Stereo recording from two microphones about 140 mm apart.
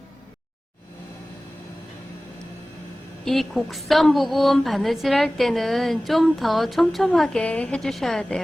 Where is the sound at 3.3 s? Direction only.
Centre (ahead or behind).